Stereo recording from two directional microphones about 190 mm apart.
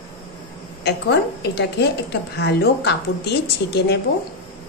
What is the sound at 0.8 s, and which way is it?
A woman's voice, 65° left (ahead or behind).